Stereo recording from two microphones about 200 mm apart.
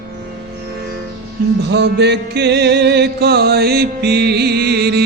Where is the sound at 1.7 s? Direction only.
60° right (ahead or behind).